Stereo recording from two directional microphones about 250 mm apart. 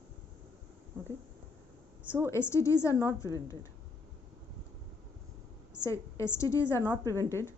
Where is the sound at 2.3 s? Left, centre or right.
Centre.